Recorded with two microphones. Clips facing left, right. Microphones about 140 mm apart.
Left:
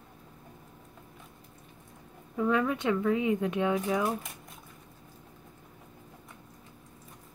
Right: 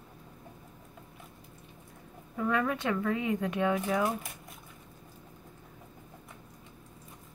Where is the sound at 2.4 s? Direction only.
20° left (ahead or behind).